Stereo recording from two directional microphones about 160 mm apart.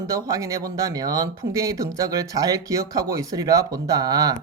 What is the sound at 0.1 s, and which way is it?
Speech, 20° right (ahead or behind).